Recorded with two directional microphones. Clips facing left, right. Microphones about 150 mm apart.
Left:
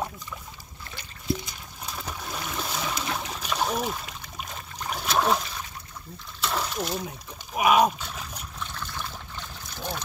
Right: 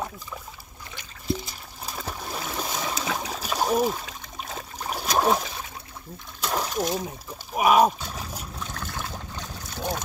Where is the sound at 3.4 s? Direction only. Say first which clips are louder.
Right 5 dB; 40° right (ahead or behind).